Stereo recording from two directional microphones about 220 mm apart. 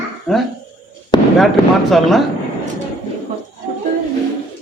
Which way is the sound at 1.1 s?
20° left (ahead or behind).